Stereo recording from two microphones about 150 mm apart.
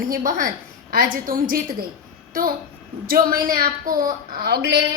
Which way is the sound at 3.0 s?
80° right.